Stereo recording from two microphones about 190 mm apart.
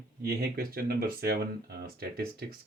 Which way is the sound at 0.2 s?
55° right (ahead or behind).